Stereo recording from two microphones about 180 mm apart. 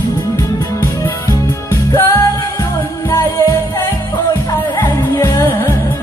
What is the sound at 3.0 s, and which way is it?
Music, 15° left (ahead or behind).